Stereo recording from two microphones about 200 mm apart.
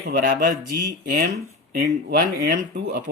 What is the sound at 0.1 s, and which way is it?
Speech, 45° right (ahead or behind).